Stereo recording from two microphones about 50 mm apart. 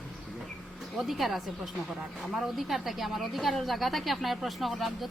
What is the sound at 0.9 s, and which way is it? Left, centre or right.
Speech, centre.